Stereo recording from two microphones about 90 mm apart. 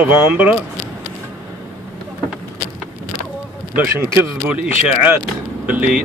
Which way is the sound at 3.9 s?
30° right (ahead or behind).